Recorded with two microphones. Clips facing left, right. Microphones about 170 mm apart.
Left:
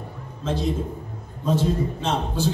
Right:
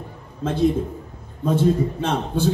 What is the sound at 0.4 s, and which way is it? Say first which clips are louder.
A man's voice: right 5 dB; 55° right (ahead or behind).